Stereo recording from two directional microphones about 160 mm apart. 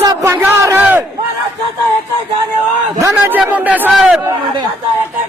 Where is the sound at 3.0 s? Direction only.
15° right (ahead or behind).